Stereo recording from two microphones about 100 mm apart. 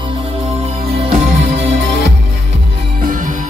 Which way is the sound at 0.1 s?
90° right.